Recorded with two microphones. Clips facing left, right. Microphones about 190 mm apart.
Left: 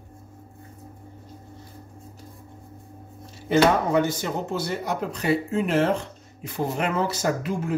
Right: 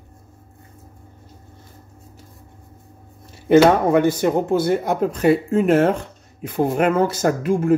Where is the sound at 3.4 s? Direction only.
55° right (ahead or behind).